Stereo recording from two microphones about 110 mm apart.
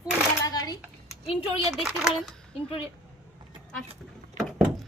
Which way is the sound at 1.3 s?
60° left (ahead or behind).